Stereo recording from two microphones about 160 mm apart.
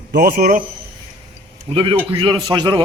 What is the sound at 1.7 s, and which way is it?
A man's voice, 30° right (ahead or behind).